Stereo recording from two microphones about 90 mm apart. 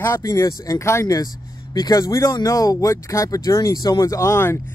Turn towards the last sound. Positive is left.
turn(degrees=25)  # may be behind; listen again after turning